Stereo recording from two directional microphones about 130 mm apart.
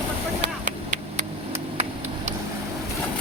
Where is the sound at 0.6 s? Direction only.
75° right (ahead or behind).